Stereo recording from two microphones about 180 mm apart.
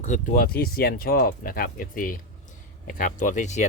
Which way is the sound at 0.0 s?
45° left (ahead or behind).